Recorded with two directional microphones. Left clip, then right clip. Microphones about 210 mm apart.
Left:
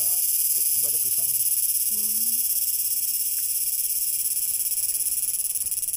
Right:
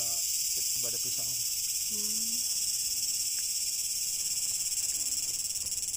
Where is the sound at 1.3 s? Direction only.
50° left (ahead or behind).